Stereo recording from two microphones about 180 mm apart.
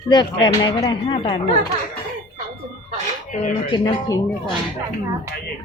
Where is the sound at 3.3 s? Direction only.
45° left (ahead or behind).